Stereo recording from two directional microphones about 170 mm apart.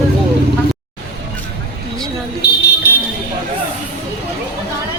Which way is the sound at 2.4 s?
70° left (ahead or behind).